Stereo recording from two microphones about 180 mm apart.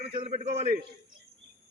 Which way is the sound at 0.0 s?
30° right (ahead or behind).